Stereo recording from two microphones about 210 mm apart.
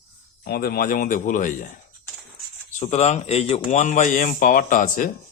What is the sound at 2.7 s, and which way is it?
Speech, 35° left (ahead or behind).